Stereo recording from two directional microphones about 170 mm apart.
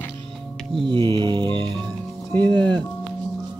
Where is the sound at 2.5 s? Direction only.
10° left (ahead or behind).